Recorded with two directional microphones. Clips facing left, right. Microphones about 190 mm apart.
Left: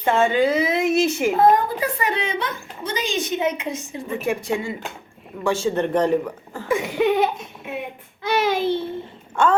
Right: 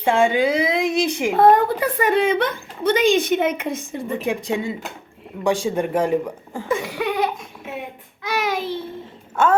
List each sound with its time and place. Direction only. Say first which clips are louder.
0.0 s speech: right 1 dB; 10° right (ahead or behind)
1.4 s a woman's voice: right 4 dB; 65° right (ahead or behind)
4.2 s speech: left 1 dB; 15° right (ahead or behind)
6.7 s a sound: left 6 dB; 20° left (ahead or behind)
8.2 s child singing: left 3 dB; 25° left (ahead or behind)
9.3 s a sound: right 1 dB; 5° right (ahead or behind)